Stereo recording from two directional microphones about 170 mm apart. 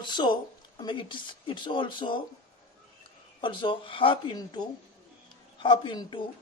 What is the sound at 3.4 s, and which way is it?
A man's voice, 30° left (ahead or behind).